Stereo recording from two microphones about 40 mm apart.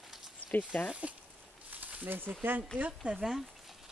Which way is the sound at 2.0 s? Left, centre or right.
Right.